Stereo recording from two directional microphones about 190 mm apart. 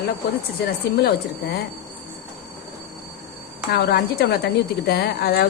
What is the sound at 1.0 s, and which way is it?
Speech, 60° left (ahead or behind).